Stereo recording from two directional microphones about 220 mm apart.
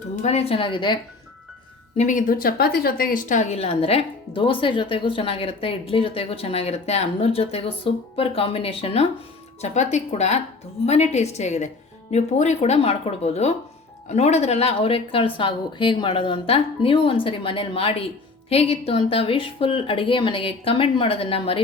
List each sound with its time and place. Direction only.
0.2 s speech: 30° left (ahead or behind)
2.0 s speech: 35° left (ahead or behind)